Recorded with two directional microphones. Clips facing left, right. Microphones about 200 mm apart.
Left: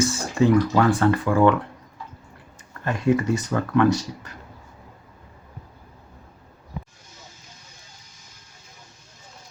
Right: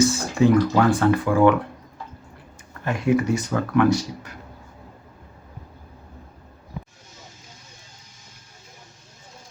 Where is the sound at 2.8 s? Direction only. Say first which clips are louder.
Even; 10° right (ahead or behind).